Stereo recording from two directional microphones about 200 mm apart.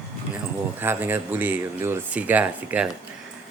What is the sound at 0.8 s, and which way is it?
Speech, 10° right (ahead or behind).